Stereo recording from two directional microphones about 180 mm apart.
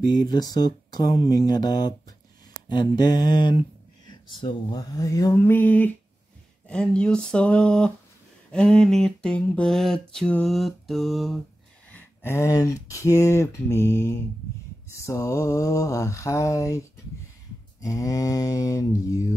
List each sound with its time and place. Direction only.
0.0 s speech: 20° left (ahead or behind); by 11.4 s centre (ahead or behind)
11.9 s speech: 15° left (ahead or behind)